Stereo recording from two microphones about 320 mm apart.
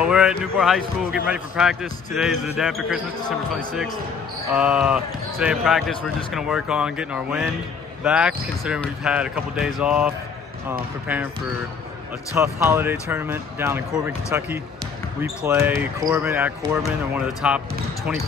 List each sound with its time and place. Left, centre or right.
0.0 s speech: centre
12.4 s speech: centre